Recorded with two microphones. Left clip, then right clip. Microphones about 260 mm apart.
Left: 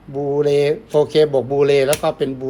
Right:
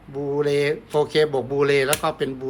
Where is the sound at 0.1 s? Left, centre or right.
Right.